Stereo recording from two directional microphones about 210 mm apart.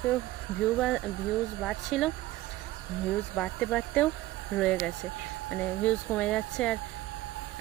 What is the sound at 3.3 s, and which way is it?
Speech, 5° left (ahead or behind).